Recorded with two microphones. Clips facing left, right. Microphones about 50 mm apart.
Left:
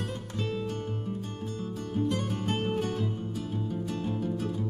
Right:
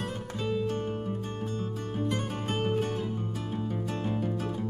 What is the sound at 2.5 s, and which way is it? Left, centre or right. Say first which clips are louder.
Music: right 1 dB; centre.